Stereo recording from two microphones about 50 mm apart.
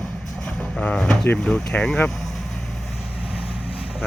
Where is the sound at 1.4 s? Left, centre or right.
Left.